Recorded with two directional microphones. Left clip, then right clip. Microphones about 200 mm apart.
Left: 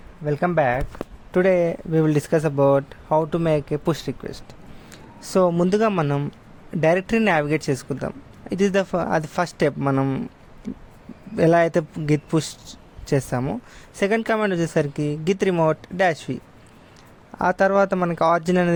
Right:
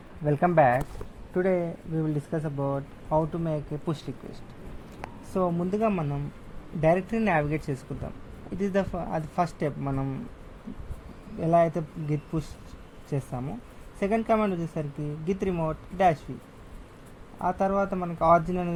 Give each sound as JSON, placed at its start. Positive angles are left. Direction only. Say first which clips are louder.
{"t": 0.3, "sound": "speech", "louder": "left 2 dB", "side_deg": 15}
{"t": 0.5, "sound": "speech", "louder": "even", "side_deg": 25}
{"t": 1.3, "sound": "speech", "louder": "left 8 dB", "side_deg": 70}
{"t": 5.3, "sound": "speech", "louder": "left 9 dB", "side_deg": 70}
{"t": 11.3, "sound": "speech", "louder": "left 6 dB", "side_deg": 45}
{"t": 17.4, "sound": "speech", "louder": "left 8 dB", "side_deg": 50}